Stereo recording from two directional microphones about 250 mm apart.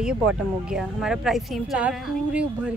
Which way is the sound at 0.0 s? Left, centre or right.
Centre.